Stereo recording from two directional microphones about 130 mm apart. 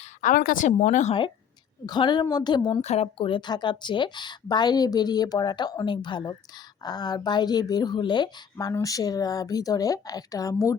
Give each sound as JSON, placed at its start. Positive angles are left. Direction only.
{"t": 0.0, "sound": "a woman's voice", "side_deg": 80}
{"t": 1.9, "sound": "a woman's voice", "side_deg": 35}
{"t": 2.8, "sound": "a woman's voice", "side_deg": 55}